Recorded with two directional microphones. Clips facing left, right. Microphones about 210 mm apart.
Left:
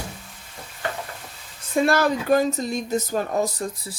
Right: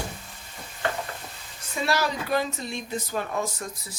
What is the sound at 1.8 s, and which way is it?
Speech, 50° left (ahead or behind).